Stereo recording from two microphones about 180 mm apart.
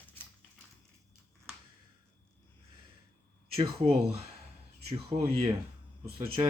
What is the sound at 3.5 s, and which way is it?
Speech, 30° right (ahead or behind).